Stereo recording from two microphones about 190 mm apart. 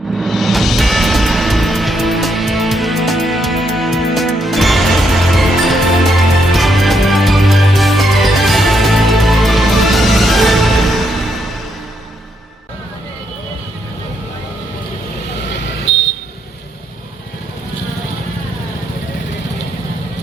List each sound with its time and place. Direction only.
0.2 s music: centre (ahead or behind)